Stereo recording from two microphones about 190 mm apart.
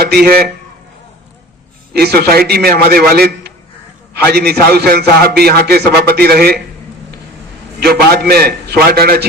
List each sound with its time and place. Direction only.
0.0 s a man's voice: 55° right (ahead or behind)
1.9 s a man's voice: 55° right (ahead or behind)
7.9 s a man's voice: 55° right (ahead or behind)